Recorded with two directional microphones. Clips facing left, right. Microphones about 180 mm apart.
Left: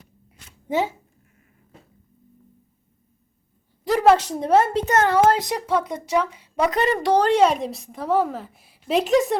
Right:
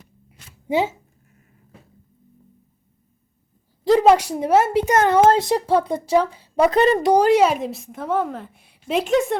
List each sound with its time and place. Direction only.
3.8 s a woman's voice: 20° right (ahead or behind)
7.1 s a woman's voice: 10° right (ahead or behind)